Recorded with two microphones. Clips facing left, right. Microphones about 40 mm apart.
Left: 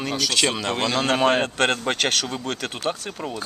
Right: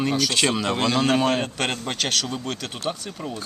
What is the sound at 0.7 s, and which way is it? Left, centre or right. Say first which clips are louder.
Speech: right 1 dB; centre.